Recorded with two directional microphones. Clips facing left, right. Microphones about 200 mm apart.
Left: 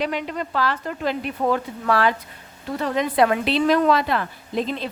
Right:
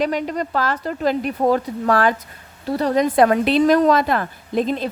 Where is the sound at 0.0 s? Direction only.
40° right (ahead or behind).